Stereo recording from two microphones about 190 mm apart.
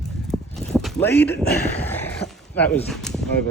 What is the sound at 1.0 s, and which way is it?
Speech, 10° left (ahead or behind).